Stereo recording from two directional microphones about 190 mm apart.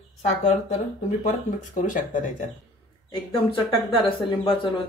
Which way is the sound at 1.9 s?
45° left (ahead or behind).